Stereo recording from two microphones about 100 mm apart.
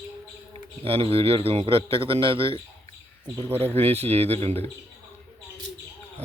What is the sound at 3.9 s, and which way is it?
Speech, 90° right.